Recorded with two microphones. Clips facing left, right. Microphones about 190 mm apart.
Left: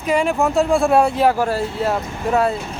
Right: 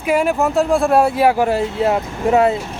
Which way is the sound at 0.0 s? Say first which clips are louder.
Right 1 dB; 5° right (ahead or behind).